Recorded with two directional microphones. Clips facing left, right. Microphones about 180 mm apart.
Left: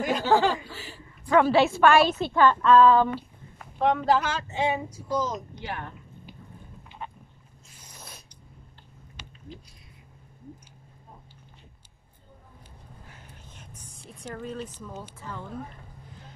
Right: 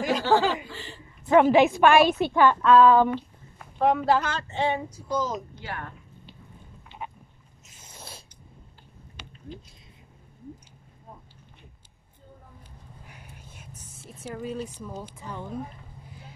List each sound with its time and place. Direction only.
0.0 s chuckle: centre (ahead or behind)
1.2 s a woman's voice: 20° right (ahead or behind)
2.6 s female singing: 5° right (ahead or behind)
3.7 s a woman's voice: 5° right (ahead or behind)
4.2 s speech: 5° left (ahead or behind)
5.1 s female singing: centre (ahead or behind)
5.6 s a sound: 20° left (ahead or behind)
7.0 s a sound: 10° right (ahead or behind)
7.6 s snort: 25° right (ahead or behind)
13.0 s a sound: 15° right (ahead or behind)
13.9 s a woman's voice: 5° right (ahead or behind)